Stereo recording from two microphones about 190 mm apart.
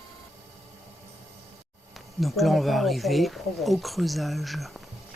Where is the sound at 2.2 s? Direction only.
Centre (ahead or behind).